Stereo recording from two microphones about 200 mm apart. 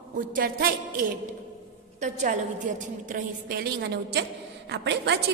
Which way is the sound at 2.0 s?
40° right (ahead or behind).